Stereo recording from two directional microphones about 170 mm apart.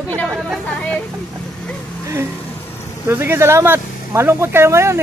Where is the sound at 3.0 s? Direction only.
15° right (ahead or behind).